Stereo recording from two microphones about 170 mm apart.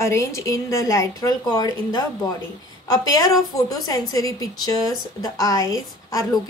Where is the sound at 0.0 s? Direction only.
15° left (ahead or behind).